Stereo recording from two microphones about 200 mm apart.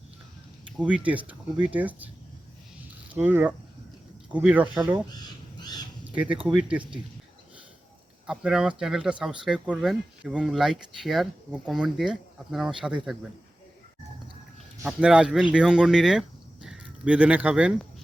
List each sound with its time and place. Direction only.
0.8 s speech: 5° right (ahead or behind)
3.2 s speech: 10° right (ahead or behind)
5.5 s bird: 20° left (ahead or behind)
6.1 s speech: 5° right (ahead or behind)
8.3 s speech: 5° right (ahead or behind)
14.8 s speech: 5° right (ahead or behind)